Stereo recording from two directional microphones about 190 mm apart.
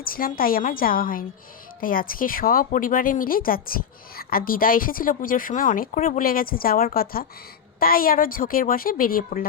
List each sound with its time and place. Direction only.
0.0 s speech: 50° left (ahead or behind)